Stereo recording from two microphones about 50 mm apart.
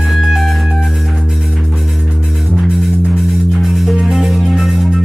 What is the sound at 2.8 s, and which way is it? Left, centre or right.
Music, centre.